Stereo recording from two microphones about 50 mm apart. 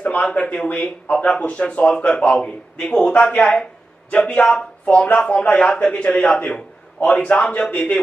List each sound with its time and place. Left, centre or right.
0.0 s speech: left
2.0 s a man's voice: centre
7.0 s a man's voice: left
7.4 s a man's voice: centre